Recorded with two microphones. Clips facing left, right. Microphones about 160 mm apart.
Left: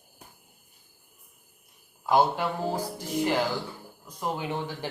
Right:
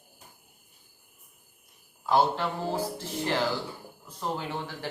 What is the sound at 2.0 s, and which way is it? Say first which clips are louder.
Speech: left 1 dB; 15° left (ahead or behind).